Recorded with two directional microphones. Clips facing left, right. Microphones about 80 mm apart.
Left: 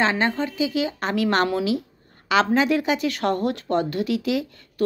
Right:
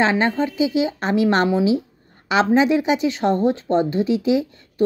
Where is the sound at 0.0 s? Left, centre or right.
Right.